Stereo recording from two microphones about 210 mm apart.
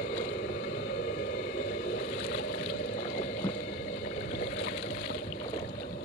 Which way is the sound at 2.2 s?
55° left (ahead or behind).